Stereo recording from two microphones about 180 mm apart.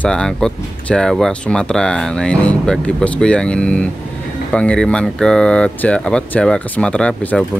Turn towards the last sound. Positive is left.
turn(degrees=5)  # may be behind; listen again after turning